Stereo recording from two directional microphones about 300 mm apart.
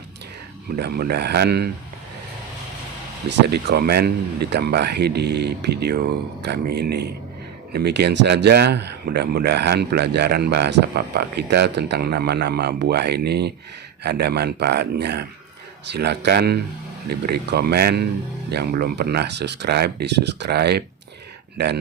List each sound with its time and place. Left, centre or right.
0.8 s speech: right
3.2 s speech: right